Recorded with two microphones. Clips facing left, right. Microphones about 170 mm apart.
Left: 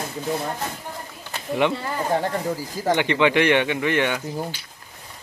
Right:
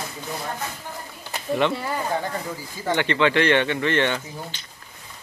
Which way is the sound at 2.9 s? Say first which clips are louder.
Left 1 dB; 15° left (ahead or behind).